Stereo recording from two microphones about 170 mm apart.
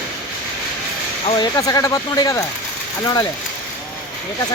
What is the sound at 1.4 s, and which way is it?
Speech, 20° left (ahead or behind).